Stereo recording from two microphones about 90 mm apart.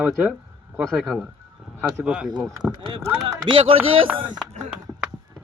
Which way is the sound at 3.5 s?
70° right (ahead or behind).